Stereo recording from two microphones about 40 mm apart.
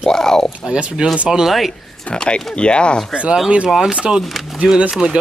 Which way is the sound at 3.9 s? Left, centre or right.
Right.